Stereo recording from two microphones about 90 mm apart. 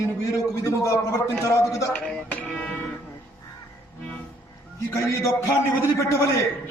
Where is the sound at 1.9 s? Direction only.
10° left (ahead or behind).